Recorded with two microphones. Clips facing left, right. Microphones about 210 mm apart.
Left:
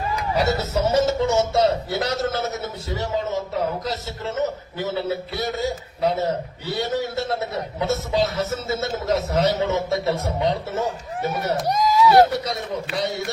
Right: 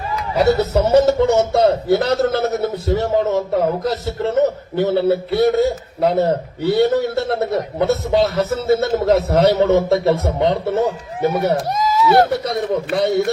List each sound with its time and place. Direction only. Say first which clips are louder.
0.3 s a man's voice: right 8 dB; 60° right (ahead or behind)
11.7 s speech: right 1 dB; centre (ahead or behind)
12.3 s a man's voice: right 7 dB; 55° right (ahead or behind)